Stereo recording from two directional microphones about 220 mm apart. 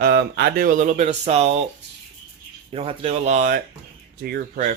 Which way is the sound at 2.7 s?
25° right (ahead or behind).